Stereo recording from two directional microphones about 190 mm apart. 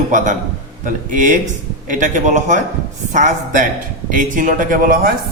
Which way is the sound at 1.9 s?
40° right (ahead or behind).